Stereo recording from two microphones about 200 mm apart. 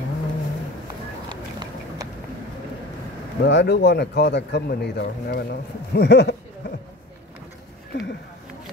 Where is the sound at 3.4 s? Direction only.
60° left (ahead or behind).